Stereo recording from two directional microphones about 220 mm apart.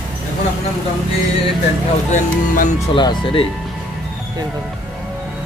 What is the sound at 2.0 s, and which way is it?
Speech, 35° left (ahead or behind).